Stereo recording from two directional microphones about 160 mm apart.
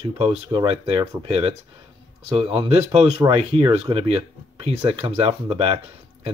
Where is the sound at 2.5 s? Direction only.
35° right (ahead or behind).